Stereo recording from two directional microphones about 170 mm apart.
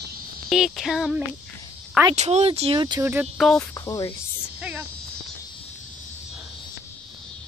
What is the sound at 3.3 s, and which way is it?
Speech, centre (ahead or behind).